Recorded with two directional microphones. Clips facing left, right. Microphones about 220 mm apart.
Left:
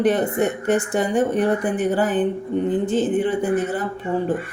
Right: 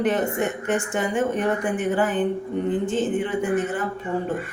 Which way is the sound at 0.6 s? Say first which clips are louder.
Left 4 dB; 35° left (ahead or behind).